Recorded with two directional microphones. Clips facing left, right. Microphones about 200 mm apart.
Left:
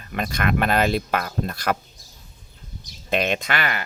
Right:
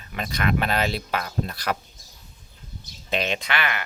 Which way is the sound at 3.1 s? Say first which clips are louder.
Left 3 dB; 50° left (ahead or behind).